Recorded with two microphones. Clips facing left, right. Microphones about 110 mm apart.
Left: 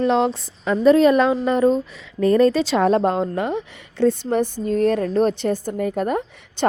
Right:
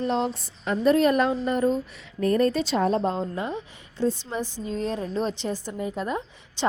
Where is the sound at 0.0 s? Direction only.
90° left.